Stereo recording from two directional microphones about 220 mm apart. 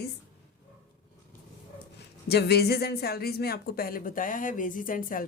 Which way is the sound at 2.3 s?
45° left (ahead or behind).